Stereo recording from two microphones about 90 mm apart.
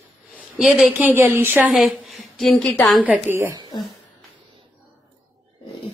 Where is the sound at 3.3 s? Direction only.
35° right (ahead or behind).